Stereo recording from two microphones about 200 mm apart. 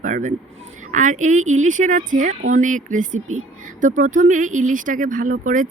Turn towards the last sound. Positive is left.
turn(degrees=-40)  # may be behind; listen again after turning